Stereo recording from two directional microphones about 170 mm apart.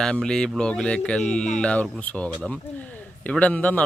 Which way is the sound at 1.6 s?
5° left (ahead or behind).